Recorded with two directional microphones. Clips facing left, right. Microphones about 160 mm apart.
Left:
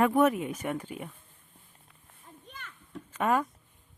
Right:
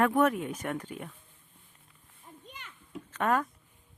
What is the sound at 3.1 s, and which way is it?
Speech, 10° left (ahead or behind).